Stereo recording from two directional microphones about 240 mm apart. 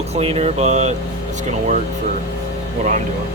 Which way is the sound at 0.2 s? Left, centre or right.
Right.